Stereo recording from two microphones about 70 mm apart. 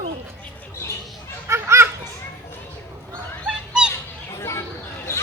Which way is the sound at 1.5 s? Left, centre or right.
Right.